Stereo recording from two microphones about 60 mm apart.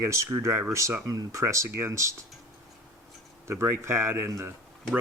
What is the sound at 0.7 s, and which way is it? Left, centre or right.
Speech, right.